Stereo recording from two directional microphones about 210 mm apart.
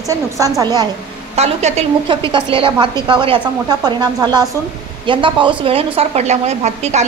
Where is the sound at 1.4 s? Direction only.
30° right (ahead or behind).